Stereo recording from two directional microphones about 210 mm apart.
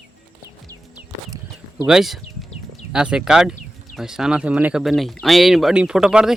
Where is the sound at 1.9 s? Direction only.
Centre (ahead or behind).